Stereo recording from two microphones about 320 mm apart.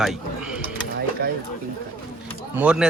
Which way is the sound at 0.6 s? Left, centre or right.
Right.